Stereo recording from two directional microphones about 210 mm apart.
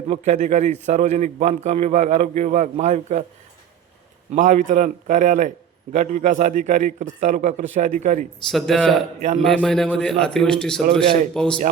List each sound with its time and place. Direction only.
0.1 s a man's voice: 35° right (ahead or behind)
4.3 s a man's voice: 40° right (ahead or behind)
8.4 s a man's voice: centre (ahead or behind)